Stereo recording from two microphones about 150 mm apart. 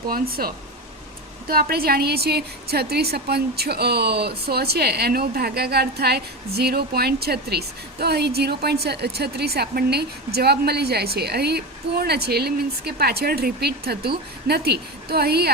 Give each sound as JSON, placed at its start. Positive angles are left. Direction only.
{"t": 0.1, "sound": "a woman's voice", "side_deg": -80}